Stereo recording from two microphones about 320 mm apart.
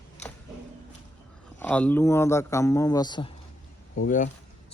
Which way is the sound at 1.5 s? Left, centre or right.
Centre.